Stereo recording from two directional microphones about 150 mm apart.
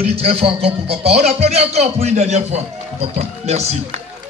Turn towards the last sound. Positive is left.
turn(degrees=-45)  # may be behind; listen again after turning